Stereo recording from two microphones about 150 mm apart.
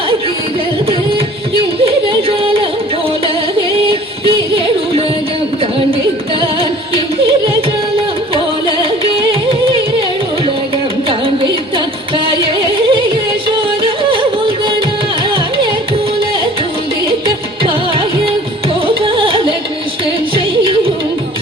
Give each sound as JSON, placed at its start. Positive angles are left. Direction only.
{"t": 2.4, "sound": "music", "side_deg": -35}
{"t": 12.6, "sound": "music", "side_deg": -35}
{"t": 18.9, "sound": "music", "side_deg": -35}